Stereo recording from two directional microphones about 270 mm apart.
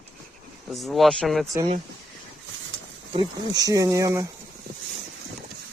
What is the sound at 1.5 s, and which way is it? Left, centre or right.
Speech, right.